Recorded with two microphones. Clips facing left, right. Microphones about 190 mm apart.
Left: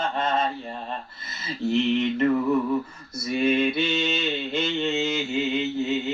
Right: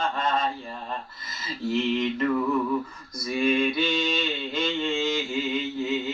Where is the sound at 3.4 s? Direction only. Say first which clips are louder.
Left 1 dB; 25° left (ahead or behind).